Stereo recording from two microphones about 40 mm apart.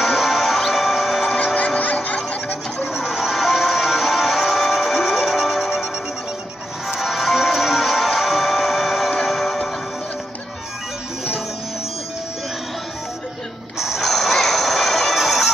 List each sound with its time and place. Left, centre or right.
0.0 s music: centre
1.3 s music: left
1.8 s a sound: left
2.9 s music: centre
6.9 s music: centre
13.7 s a sound: centre
14.0 s music: centre